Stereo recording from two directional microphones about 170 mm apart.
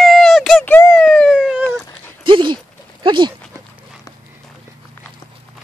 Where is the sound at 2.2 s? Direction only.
30° right (ahead or behind).